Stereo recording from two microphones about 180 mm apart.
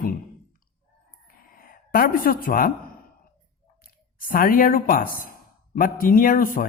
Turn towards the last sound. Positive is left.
turn(degrees=50)  # may be behind; listen again after turning